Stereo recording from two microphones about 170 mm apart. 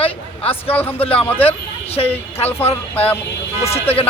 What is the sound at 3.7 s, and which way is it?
Speech, 35° left (ahead or behind).